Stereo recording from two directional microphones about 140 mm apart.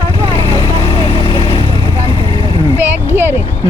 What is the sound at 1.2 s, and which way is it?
Vehicle, 35° left (ahead or behind).